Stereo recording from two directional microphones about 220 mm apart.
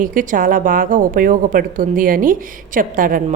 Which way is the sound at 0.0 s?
35° right (ahead or behind).